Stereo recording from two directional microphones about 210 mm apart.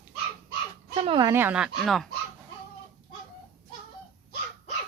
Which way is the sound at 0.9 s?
25° right (ahead or behind).